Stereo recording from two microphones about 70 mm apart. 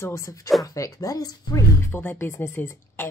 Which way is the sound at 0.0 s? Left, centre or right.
Left.